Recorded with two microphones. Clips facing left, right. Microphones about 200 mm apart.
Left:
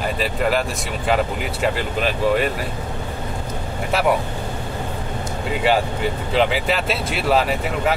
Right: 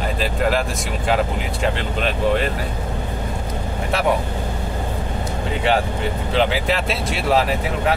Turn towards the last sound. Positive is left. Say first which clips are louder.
# even
turn(degrees=0)  # may be behind; listen again after turning